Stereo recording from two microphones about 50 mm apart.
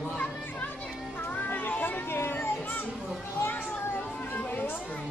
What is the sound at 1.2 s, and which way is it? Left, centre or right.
Children playing, left.